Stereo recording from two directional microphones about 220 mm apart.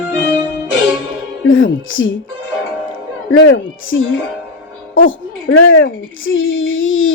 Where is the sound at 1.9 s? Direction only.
60° left (ahead or behind).